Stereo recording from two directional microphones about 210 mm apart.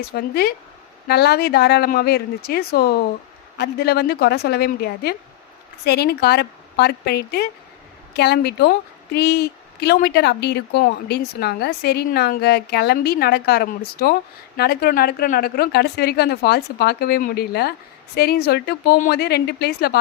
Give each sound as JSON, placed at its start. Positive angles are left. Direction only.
{"t": 0.1, "sound": "speech", "side_deg": 45}